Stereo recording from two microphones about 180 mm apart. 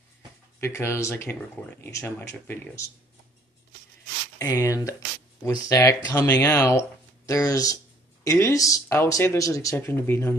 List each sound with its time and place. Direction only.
0.6 s speech: 15° left (ahead or behind)
4.4 s speech: 20° left (ahead or behind)